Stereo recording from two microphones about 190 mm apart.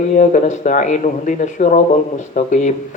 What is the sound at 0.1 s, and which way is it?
A man's voice, 40° left (ahead or behind).